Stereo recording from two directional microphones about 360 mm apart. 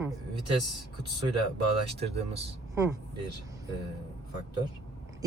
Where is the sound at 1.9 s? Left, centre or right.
Centre.